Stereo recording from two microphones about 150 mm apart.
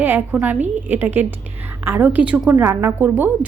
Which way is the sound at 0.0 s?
10° right (ahead or behind).